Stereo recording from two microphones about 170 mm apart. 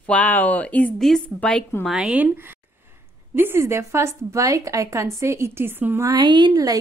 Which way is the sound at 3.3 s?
15° right (ahead or behind).